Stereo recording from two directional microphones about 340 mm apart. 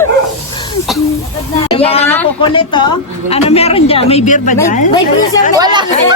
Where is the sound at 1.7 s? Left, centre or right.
Centre.